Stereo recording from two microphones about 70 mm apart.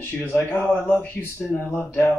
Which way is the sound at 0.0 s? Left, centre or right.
Left.